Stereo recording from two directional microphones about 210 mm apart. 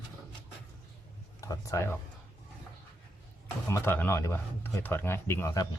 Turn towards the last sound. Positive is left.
turn(degrees=15)  # may be behind; listen again after turning